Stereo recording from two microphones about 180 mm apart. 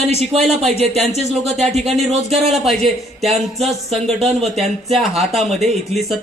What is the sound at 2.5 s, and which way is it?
Speech, centre (ahead or behind).